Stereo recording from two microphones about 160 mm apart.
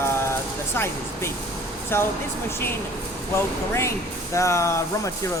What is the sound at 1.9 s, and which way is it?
Speech, 15° left (ahead or behind).